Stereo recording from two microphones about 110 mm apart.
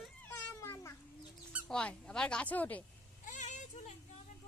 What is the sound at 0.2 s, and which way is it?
Cat, 15° left (ahead or behind).